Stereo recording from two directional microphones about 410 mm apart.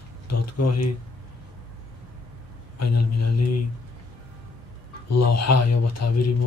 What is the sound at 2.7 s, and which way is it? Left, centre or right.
Speech, left.